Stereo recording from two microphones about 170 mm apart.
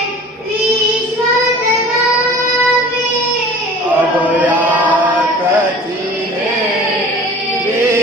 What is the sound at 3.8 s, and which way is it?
Chant, 10° right (ahead or behind).